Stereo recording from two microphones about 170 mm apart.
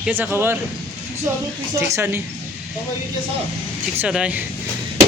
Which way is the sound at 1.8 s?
15° right (ahead or behind).